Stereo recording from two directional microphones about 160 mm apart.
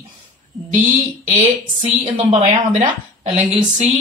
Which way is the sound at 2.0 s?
45° right (ahead or behind).